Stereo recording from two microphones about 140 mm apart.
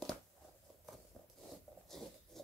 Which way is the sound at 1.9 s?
Centre (ahead or behind).